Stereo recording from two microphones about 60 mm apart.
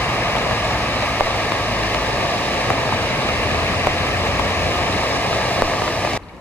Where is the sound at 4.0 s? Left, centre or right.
Left.